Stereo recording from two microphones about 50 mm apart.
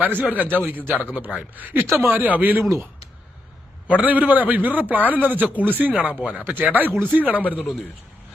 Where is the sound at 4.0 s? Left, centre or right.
Right.